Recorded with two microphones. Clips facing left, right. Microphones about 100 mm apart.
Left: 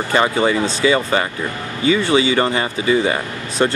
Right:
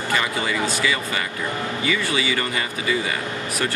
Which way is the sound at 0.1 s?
35° left (ahead or behind).